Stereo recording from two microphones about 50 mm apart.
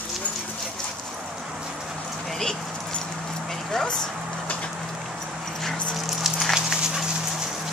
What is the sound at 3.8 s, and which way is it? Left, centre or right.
Speech, centre.